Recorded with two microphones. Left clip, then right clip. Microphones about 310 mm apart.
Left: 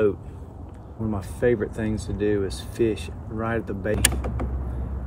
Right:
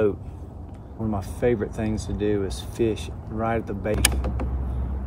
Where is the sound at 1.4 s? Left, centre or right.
Centre.